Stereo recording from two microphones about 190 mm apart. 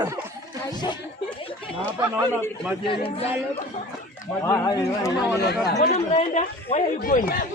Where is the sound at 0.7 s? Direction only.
20° left (ahead or behind).